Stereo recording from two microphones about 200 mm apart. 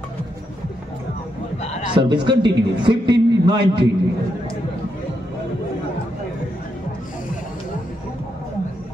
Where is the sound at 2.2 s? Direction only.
25° right (ahead or behind).